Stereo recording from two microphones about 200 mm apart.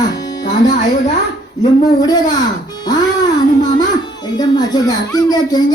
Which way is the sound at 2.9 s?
20° left (ahead or behind).